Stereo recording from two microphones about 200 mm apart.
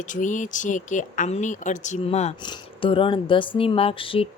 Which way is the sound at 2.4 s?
25° left (ahead or behind).